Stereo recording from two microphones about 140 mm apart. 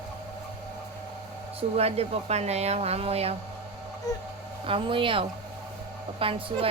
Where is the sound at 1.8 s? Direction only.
45° right (ahead or behind).